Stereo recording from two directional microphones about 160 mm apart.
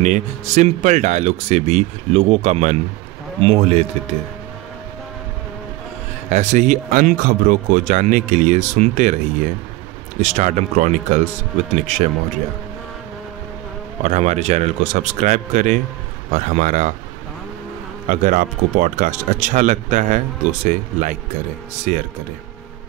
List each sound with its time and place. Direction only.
0.0 s speech: 45° right (ahead or behind)
6.2 s speech: 45° right (ahead or behind)
14.0 s speech: 45° right (ahead or behind)
18.0 s speech: 55° right (ahead or behind)